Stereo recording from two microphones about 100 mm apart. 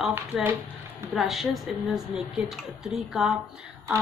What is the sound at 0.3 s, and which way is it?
Speech, 5° right (ahead or behind).